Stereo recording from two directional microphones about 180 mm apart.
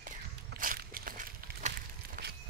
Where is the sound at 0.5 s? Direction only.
55° right (ahead or behind).